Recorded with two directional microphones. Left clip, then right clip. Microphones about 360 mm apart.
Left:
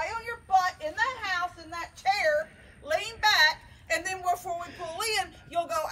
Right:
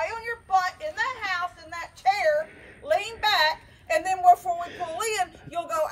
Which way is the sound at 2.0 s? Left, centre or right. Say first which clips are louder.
Right 3 dB; right.